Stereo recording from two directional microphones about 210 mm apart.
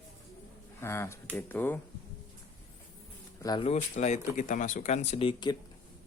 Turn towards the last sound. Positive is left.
turn(degrees=20)  # may be behind; listen again after turning